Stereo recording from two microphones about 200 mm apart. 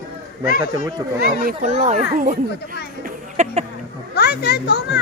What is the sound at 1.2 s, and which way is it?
A child's voice, 40° right (ahead or behind).